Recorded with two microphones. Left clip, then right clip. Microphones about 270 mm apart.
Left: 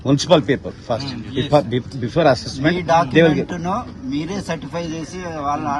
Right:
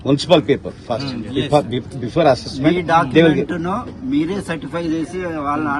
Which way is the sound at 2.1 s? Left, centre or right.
Left.